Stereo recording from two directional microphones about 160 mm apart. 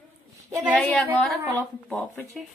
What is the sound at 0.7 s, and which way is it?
Speech, 5° left (ahead or behind).